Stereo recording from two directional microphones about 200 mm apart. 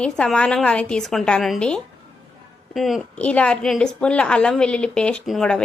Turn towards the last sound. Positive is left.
turn(degrees=0)  # may be behind; listen again after turning